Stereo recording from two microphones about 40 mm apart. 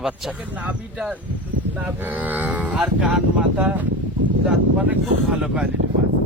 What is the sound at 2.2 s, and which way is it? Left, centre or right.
Speech, right.